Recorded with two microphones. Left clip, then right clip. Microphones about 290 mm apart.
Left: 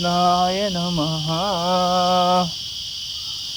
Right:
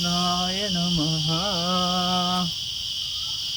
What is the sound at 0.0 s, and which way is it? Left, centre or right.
Cricket, centre.